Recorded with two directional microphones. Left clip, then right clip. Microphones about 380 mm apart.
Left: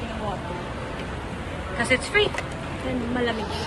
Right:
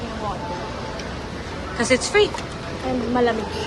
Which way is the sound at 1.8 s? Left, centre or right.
Centre.